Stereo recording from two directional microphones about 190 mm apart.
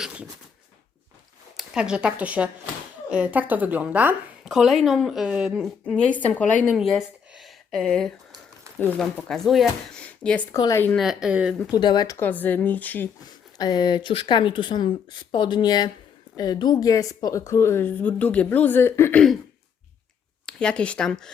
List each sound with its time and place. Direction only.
0.0 s a sound: 5° right (ahead or behind)
1.5 s a woman's voice: 5° right (ahead or behind)
6.7 s a sound: centre (ahead or behind)
8.8 s a woman's voice: 10° left (ahead or behind)
10.9 s a woman's voice: centre (ahead or behind)
11.7 s a woman's voice: 20° left (ahead or behind)
13.6 s a woman's voice: 20° left (ahead or behind)
20.5 s a woman's voice: 5° left (ahead or behind)